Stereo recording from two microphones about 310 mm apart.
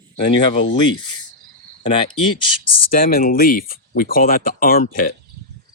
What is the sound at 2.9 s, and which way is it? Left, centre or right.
Speech, left.